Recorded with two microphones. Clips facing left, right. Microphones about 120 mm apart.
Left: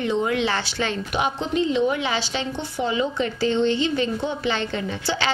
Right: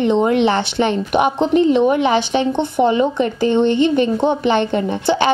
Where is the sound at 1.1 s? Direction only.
55° right (ahead or behind).